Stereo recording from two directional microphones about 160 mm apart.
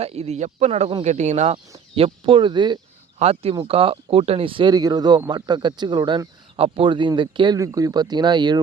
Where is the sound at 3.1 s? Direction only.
40° right (ahead or behind).